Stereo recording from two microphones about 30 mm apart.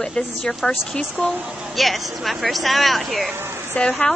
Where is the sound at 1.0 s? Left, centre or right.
Left.